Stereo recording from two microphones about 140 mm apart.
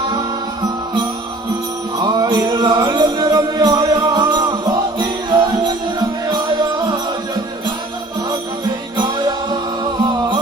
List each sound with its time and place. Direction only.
2.0 s music: 30° right (ahead or behind)
9.0 s music: 30° right (ahead or behind)